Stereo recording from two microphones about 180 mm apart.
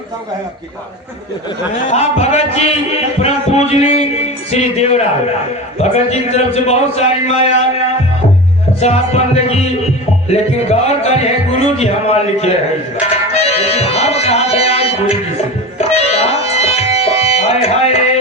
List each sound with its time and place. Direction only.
1.8 s a man's voice: 40° left (ahead or behind)
8.8 s a man's voice: 35° left (ahead or behind)
13.3 s music: 35° left (ahead or behind)
16.0 s tabla: 35° left (ahead or behind)